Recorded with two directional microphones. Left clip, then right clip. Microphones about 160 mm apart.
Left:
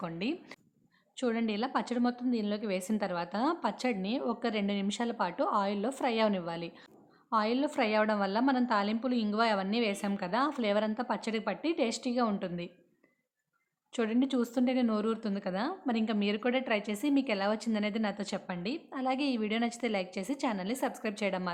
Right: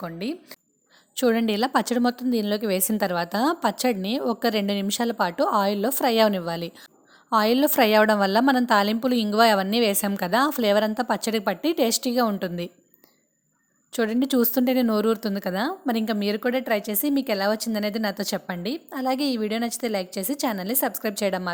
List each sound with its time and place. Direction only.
0.0 s speech: 30° right (ahead or behind)
1.1 s a woman's voice: 45° right (ahead or behind)
13.9 s speech: 35° right (ahead or behind)